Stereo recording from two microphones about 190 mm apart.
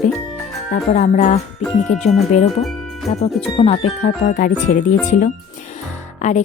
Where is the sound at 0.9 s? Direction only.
40° left (ahead or behind).